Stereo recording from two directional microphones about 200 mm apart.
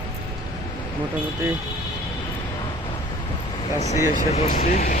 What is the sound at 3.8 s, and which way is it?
Speech, 40° left (ahead or behind).